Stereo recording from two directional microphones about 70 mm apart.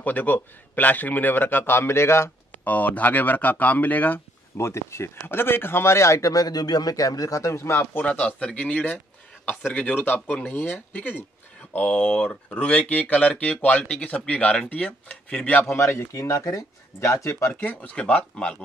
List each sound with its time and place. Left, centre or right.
0.0 s speech: left
2.5 s speech: left
4.6 s speech: left
8.1 s speech: centre
15.7 s speech: left
17.5 s speech: left